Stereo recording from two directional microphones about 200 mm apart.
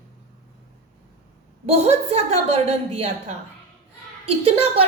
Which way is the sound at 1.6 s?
30° right (ahead or behind).